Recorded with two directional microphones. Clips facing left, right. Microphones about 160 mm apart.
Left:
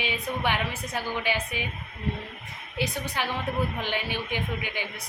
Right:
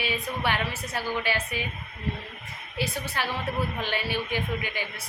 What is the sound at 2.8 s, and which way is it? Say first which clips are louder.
A woman's voice: left 1 dB; 15° left (ahead or behind).